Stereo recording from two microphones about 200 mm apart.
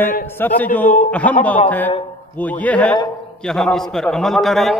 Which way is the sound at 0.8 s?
40° left (ahead or behind).